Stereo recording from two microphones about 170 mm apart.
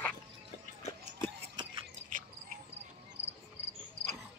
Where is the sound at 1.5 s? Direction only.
30° right (ahead or behind).